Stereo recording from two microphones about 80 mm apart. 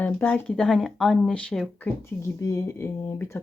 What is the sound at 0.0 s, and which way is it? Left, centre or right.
Speech, centre.